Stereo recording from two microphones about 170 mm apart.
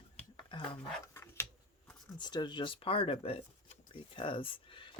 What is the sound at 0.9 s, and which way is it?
Dog, 15° left (ahead or behind).